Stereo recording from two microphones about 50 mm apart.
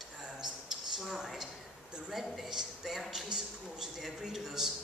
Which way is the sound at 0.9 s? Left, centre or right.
Centre.